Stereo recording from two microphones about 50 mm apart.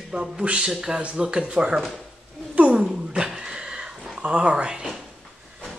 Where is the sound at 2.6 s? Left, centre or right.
Right.